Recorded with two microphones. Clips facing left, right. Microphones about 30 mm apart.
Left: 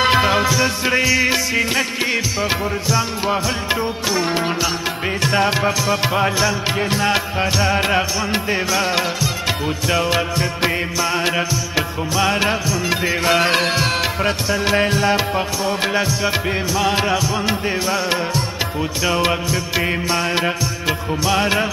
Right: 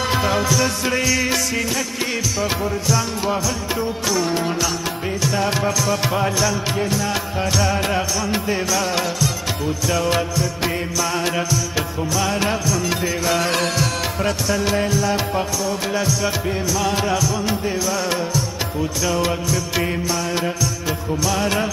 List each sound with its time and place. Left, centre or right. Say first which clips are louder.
0.0 s music: left 6 dB; left
0.3 s music: left 2 dB; left
3.8 s music: left 1 dB; left
5.5 s music: left 2 dB; left
6.9 s music: left 4 dB; left
7.3 s music: left 2 dB; left
10.3 s music: left 3 dB; left
14.9 s music: left 3 dB; left
15.9 s music: left 2 dB; left